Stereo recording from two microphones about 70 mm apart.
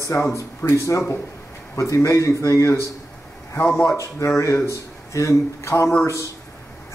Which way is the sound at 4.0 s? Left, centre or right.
Left.